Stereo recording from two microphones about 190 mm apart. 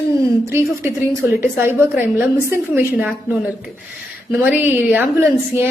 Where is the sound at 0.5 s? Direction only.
15° right (ahead or behind).